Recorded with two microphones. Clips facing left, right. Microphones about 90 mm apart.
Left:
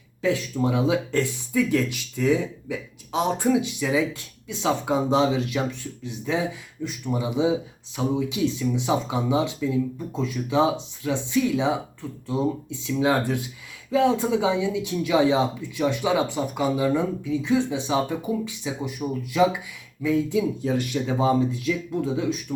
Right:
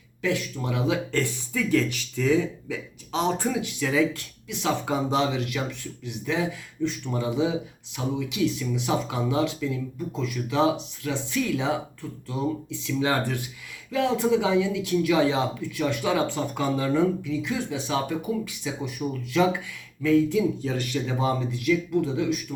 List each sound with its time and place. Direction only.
0.2 s speech: 25° left (ahead or behind)
6.8 s speech: 10° left (ahead or behind)
13.0 s speech: 15° left (ahead or behind)